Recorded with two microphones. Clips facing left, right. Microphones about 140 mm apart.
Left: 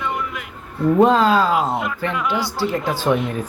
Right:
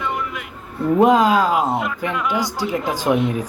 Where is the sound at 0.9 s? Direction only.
10° right (ahead or behind).